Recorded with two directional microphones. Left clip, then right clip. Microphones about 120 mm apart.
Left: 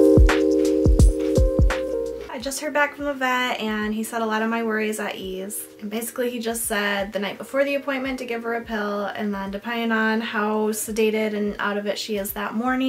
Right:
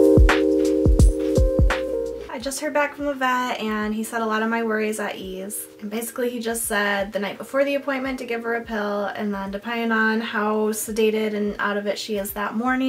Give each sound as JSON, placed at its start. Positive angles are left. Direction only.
{"t": 0.0, "sound": "music", "side_deg": 0}
{"t": 2.4, "sound": "a woman's voice", "side_deg": -5}